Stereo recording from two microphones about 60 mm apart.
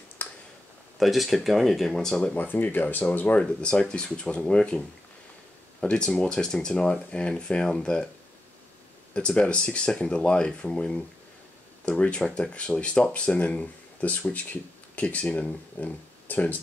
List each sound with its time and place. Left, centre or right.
0.2 s tick-tock: left
0.9 s speech: centre
2.3 s speech: left
3.3 s speech: centre
5.8 s speech: centre
9.1 s speech: centre
12.0 s speech: centre